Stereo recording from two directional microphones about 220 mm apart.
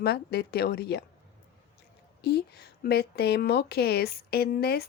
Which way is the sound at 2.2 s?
45° left (ahead or behind).